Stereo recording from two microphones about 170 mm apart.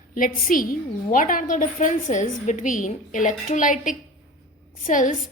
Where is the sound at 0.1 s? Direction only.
55° left (ahead or behind).